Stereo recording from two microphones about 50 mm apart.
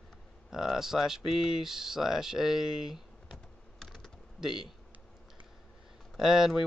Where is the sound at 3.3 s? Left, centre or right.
Centre.